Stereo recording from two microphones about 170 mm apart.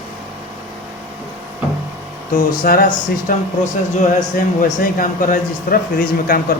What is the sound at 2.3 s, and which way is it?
Speech, 55° left (ahead or behind).